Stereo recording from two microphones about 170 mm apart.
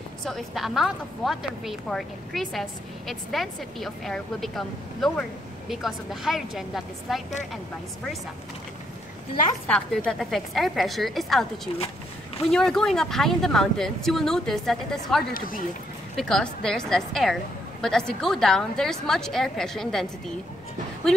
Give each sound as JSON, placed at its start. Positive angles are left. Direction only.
{"t": 0.2, "sound": "a woman's voice", "side_deg": 0}
{"t": 9.7, "sound": "a woman's voice", "side_deg": 5}
{"t": 15.3, "sound": "speech", "side_deg": 55}
{"t": 16.2, "sound": "a woman's voice", "side_deg": 5}